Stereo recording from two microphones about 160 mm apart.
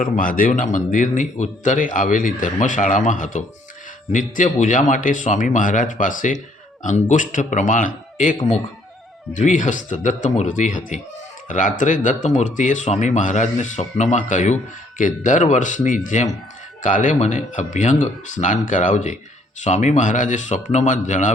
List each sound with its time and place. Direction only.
0.0 s speech: 60° left (ahead or behind)